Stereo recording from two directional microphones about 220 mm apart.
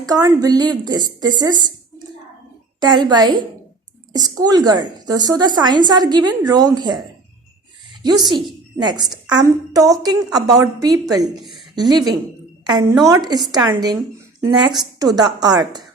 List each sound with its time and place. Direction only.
0.0 s a woman's voice: 15° right (ahead or behind)
2.8 s a woman's voice: 20° right (ahead or behind)
8.0 s a woman's voice: 20° right (ahead or behind)